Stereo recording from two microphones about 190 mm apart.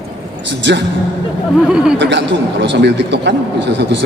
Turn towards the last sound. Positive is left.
turn(degrees=-65)  # may be behind; listen again after turning